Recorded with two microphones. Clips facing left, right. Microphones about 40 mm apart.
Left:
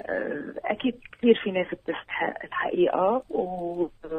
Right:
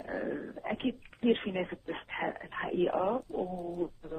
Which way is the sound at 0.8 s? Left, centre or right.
Left.